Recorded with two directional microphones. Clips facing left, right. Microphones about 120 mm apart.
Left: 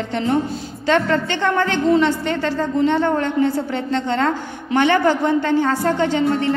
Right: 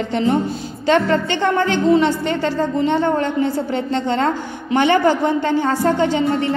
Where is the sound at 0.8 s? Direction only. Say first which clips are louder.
Right 2 dB; 15° right (ahead or behind).